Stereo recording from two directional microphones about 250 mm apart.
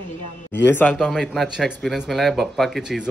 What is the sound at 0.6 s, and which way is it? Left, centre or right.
Speech, centre.